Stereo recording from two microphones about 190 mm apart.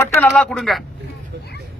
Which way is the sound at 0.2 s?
5° left (ahead or behind).